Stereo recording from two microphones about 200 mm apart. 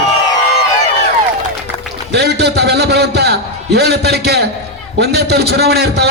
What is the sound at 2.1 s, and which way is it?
A man's voice, 55° right (ahead or behind).